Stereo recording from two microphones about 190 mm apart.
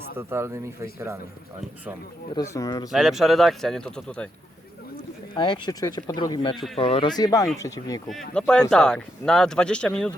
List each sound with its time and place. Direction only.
0.2 s speech: 10° right (ahead or behind)
2.3 s speech: 15° left (ahead or behind)
2.9 s speech: centre (ahead or behind)
5.3 s speech: 25° left (ahead or behind)
8.0 s speech: 5° left (ahead or behind)